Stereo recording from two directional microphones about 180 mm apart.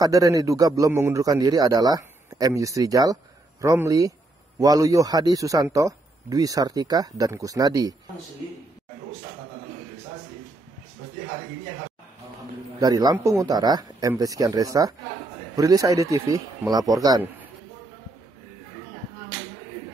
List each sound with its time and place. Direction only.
0.0 s a man's voice: 20° right (ahead or behind)
12.8 s a man's voice: 20° right (ahead or behind)